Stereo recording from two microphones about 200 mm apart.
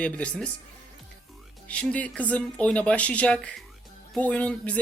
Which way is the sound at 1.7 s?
5° left (ahead or behind).